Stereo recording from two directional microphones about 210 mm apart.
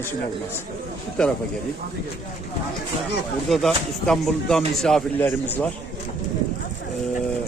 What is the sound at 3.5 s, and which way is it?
Speech, centre (ahead or behind).